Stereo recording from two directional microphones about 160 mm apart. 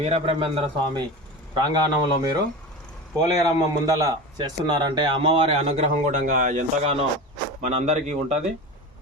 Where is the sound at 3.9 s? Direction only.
20° right (ahead or behind); by 8.4 s 45° right (ahead or behind).